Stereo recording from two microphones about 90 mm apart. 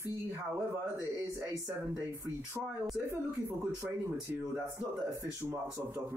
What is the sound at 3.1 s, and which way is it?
Speech, 25° right (ahead or behind).